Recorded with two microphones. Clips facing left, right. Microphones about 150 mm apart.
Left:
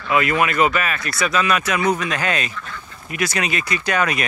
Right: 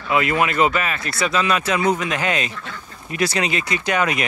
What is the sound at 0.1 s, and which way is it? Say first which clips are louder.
Speech: even; 25° right (ahead or behind).